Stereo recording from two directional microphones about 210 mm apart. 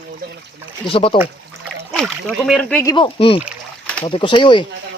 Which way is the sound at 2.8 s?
20° left (ahead or behind).